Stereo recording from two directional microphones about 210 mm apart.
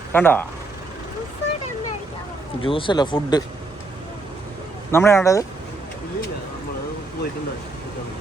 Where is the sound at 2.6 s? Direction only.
25° left (ahead or behind).